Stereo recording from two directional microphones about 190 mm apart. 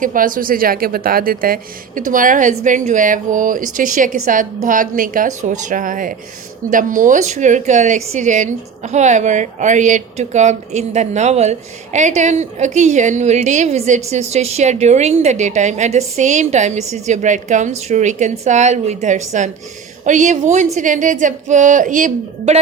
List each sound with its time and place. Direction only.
0.0 s a woman's voice: 45° right (ahead or behind)